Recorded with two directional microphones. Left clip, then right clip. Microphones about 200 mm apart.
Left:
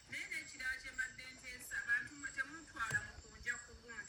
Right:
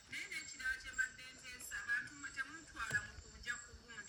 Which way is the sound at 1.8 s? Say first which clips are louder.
Left 3 dB; centre (ahead or behind).